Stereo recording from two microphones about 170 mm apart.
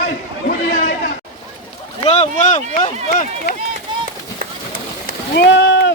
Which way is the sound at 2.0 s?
35° left (ahead or behind).